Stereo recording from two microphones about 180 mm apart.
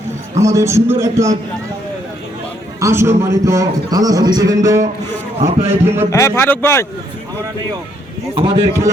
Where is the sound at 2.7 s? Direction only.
15° right (ahead or behind).